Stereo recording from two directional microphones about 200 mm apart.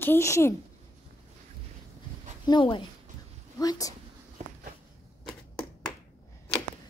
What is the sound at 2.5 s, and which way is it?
A woman's voice, 25° left (ahead or behind).